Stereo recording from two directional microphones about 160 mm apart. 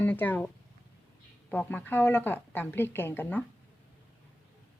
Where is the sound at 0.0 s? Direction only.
10° left (ahead or behind).